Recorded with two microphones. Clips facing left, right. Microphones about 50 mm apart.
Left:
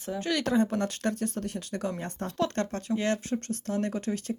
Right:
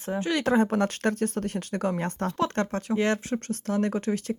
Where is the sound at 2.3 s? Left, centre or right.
Right.